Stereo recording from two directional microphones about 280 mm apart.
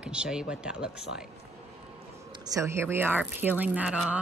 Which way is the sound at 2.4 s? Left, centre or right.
Centre.